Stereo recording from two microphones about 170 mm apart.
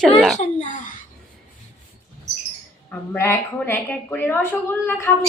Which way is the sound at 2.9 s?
15° left (ahead or behind).